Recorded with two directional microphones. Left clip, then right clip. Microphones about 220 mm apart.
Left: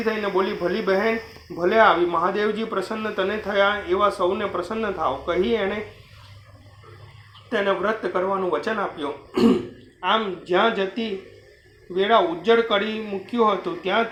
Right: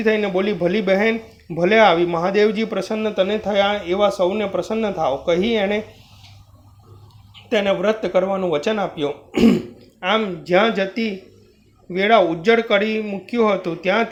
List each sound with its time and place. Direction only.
0.1 s speech: 45° right (ahead or behind)
7.5 s speech: 45° right (ahead or behind)